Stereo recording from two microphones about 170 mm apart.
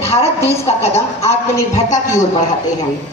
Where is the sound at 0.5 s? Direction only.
40° left (ahead or behind).